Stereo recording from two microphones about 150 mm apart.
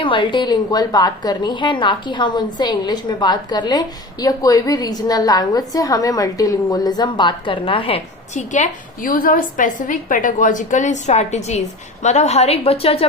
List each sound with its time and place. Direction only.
0.0 s a woman's voice: 35° left (ahead or behind)